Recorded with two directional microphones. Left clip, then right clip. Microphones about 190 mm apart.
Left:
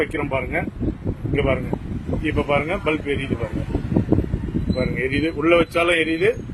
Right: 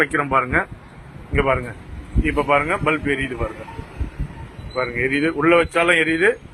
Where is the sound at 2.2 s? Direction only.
20° left (ahead or behind).